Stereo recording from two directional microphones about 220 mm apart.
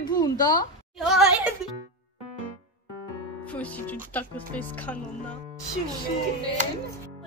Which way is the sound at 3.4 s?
5° left (ahead or behind).